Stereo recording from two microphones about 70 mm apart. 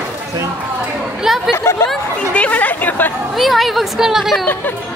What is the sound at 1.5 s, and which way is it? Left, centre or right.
Speech, left.